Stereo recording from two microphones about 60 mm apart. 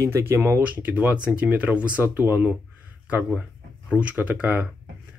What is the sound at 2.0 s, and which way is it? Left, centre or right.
Speech, right.